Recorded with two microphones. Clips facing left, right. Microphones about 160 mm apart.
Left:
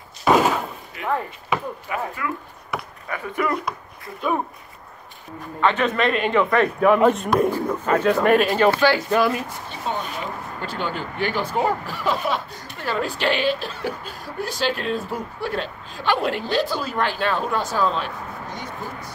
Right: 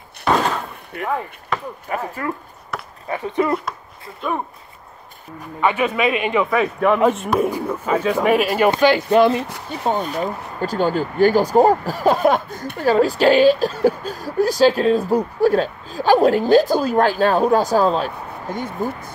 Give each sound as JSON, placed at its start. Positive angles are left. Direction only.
{"t": 0.2, "sound": "a sound", "side_deg": 5}
{"t": 1.0, "sound": "speech", "side_deg": 0}
{"t": 1.9, "sound": "speech", "side_deg": -40}
{"t": 3.1, "sound": "speech", "side_deg": -25}
{"t": 5.6, "sound": "speech", "side_deg": -10}
{"t": 9.8, "sound": "speech", "side_deg": -45}